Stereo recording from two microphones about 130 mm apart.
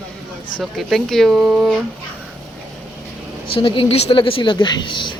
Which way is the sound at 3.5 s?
45° left (ahead or behind).